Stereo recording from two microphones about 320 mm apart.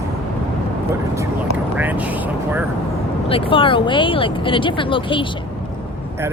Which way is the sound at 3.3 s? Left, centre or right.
Centre.